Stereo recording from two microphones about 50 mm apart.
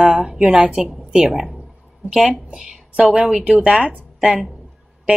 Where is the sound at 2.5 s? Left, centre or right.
Centre.